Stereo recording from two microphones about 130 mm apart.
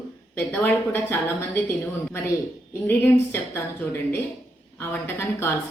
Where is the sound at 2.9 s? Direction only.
15° left (ahead or behind).